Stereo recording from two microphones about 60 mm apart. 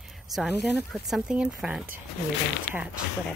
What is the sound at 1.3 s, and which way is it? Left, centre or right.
Speech, centre.